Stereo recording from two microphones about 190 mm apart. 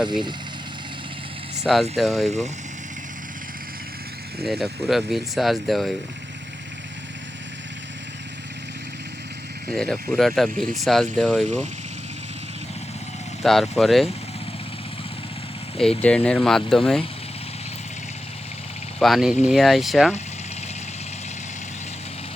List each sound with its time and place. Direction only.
0.0 s speech: 25° right (ahead or behind)
1.5 s speech: centre (ahead or behind)
4.4 s speech: centre (ahead or behind)
9.7 s speech: 5° left (ahead or behind)
13.4 s speech: centre (ahead or behind)
16.0 s speech: 5° left (ahead or behind)
18.9 s speech: centre (ahead or behind)